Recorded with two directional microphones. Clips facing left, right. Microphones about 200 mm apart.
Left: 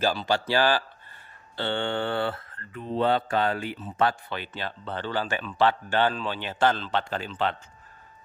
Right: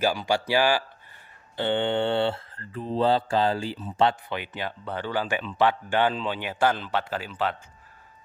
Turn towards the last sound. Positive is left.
turn(degrees=-5)  # may be behind; listen again after turning